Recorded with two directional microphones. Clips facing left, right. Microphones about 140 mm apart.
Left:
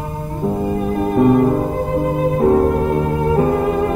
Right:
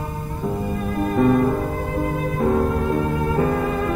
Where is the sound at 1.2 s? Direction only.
25° left (ahead or behind).